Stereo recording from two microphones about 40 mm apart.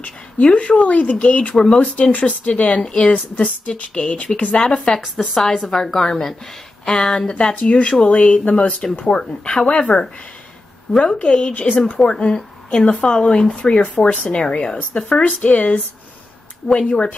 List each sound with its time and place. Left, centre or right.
0.4 s speech: left
4.6 s a woman's voice: left
5.5 s a woman's voice: centre; by 11.5 s left
11.5 s speech: left
12.1 s a woman's voice: left
14.2 s a woman's voice: centre
15.2 s speech: left
16.6 s a woman's voice: left